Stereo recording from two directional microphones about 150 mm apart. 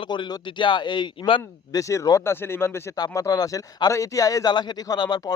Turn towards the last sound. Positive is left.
turn(degrees=25)  # may be behind; listen again after turning